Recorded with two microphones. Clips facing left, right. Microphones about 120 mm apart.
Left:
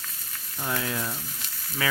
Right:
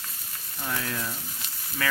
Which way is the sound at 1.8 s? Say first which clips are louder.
Left 1 dB; 5° left (ahead or behind).